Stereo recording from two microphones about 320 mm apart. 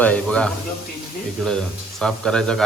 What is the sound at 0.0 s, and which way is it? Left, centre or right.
A man's voice, centre.